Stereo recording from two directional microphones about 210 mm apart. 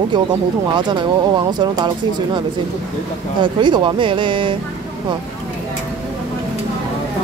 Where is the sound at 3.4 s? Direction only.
20° right (ahead or behind).